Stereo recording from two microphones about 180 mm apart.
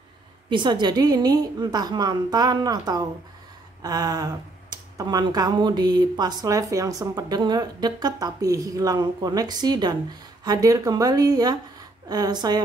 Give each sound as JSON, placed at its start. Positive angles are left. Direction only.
{"t": 0.5, "sound": "speech", "side_deg": -25}